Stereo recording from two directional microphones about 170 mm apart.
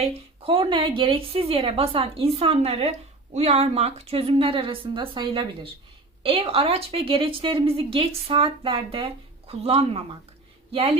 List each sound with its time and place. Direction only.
0.0 s a woman's voice: 30° right (ahead or behind)